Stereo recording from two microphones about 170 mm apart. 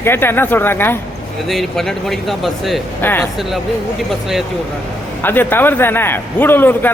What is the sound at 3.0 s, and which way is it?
Speech, 10° left (ahead or behind).